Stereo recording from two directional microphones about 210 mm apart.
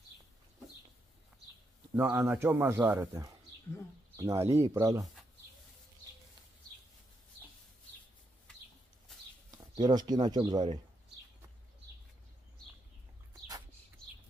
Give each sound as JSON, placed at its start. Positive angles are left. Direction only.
{"t": 2.0, "sound": "a man's voice", "side_deg": -10}
{"t": 9.8, "sound": "speech", "side_deg": -20}